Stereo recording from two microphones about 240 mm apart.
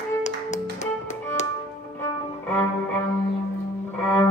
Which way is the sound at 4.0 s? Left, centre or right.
Centre.